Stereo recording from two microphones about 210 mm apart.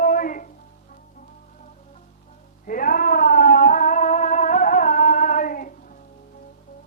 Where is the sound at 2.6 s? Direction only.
40° left (ahead or behind).